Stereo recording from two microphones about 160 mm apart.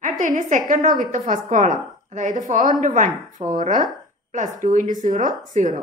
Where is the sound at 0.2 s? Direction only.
55° right (ahead or behind).